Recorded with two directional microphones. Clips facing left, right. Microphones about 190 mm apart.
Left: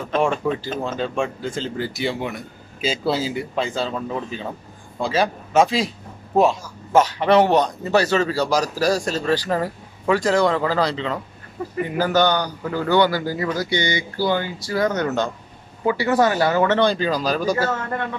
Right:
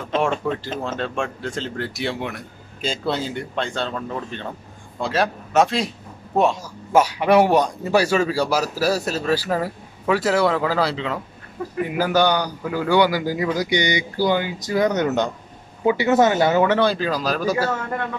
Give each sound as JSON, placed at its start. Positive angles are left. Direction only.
{"t": 0.2, "sound": "a man's voice", "side_deg": 5}
{"t": 16.7, "sound": "speech", "side_deg": -5}